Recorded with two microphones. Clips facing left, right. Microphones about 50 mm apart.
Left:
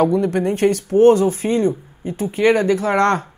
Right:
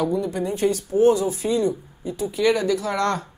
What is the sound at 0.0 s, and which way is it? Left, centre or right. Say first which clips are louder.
Speech: left 7 dB; left.